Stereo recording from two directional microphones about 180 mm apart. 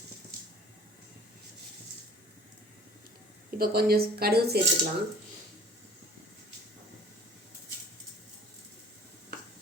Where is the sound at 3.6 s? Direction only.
55° right (ahead or behind).